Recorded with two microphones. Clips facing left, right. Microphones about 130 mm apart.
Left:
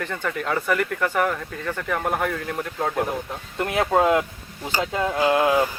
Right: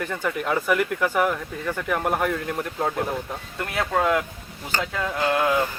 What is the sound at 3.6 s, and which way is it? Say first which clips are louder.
Speech: left 4 dB; 20° left (ahead or behind).